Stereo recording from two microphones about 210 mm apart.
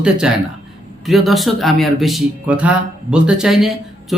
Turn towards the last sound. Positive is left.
turn(degrees=0)  # may be behind; listen again after turning